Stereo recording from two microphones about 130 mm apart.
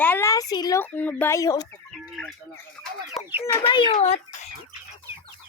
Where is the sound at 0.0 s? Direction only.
15° left (ahead or behind).